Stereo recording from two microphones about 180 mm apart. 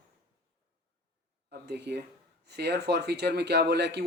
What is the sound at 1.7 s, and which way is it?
Speech, 65° right (ahead or behind).